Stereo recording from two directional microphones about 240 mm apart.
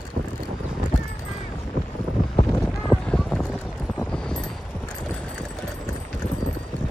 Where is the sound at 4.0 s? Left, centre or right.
Centre.